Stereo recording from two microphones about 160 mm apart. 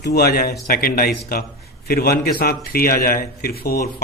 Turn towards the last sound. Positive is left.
turn(degrees=70)  # may be behind; listen again after turning